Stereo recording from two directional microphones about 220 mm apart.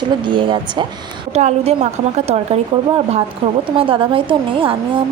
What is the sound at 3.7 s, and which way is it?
A woman's voice, 25° right (ahead or behind).